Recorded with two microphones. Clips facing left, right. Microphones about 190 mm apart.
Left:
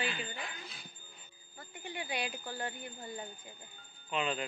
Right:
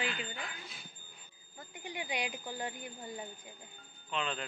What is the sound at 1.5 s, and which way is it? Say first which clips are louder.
Speech: even; 15° right (ahead or behind).